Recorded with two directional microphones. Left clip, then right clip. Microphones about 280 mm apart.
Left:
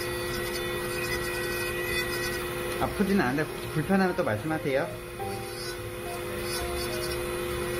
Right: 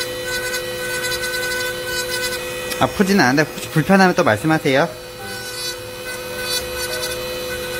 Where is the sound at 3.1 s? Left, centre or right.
Right.